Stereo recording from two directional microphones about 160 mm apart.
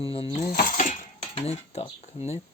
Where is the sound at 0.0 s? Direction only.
35° left (ahead or behind).